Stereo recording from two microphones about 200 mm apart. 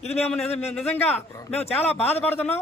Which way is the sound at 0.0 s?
30° left (ahead or behind).